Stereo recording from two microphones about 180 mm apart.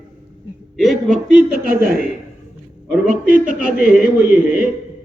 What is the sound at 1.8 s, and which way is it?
Speech, 55° right (ahead or behind).